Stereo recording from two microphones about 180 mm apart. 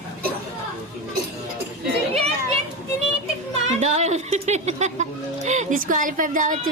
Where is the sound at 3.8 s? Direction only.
40° right (ahead or behind).